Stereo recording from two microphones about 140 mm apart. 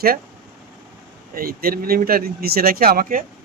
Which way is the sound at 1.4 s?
90° right.